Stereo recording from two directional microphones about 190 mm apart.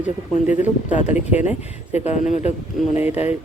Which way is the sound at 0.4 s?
40° left (ahead or behind).